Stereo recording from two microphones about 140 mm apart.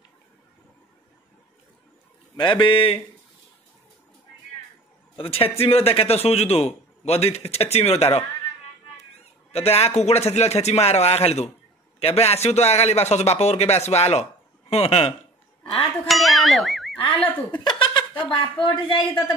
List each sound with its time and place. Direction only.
2.3 s a woman's voice: 35° left (ahead or behind)
5.1 s a man's voice: 40° left (ahead or behind)
9.5 s a man's voice: 45° left (ahead or behind)
15.7 s speech: centre (ahead or behind)
17.5 s a woman's voice: 35° left (ahead or behind)